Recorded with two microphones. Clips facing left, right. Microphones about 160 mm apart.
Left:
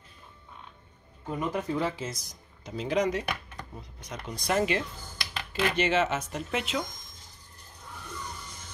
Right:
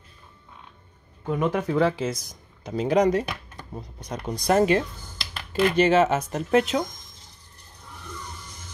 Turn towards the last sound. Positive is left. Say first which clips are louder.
# right 10 dB
turn(degrees=-40)  # may be behind; listen again after turning